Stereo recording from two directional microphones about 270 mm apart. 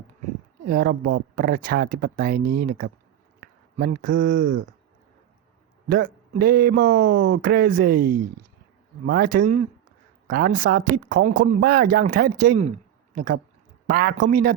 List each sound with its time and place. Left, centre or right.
0.7 s speech: right
6.4 s speech: right